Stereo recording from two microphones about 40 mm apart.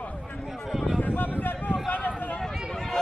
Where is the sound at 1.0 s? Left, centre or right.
Left.